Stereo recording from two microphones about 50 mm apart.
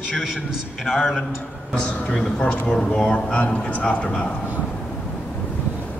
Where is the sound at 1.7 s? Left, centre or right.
Left.